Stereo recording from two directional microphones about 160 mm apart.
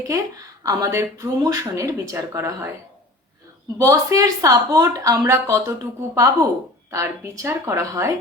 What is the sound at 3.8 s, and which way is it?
Speech, 20° right (ahead or behind).